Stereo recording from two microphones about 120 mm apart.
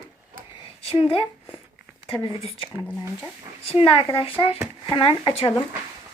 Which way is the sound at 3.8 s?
50° left (ahead or behind).